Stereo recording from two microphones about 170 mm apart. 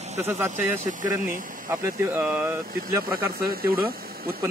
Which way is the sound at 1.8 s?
15° right (ahead or behind).